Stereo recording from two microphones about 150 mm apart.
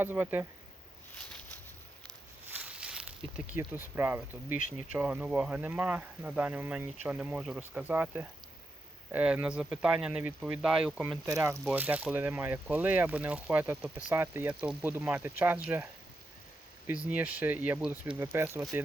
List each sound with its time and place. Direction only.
0.0 s speech: 15° right (ahead or behind)
2.5 s a sound: 10° right (ahead or behind)
3.6 s speech: 15° right (ahead or behind)
11.3 s speech: 20° right (ahead or behind)
17.1 s speech: 10° right (ahead or behind)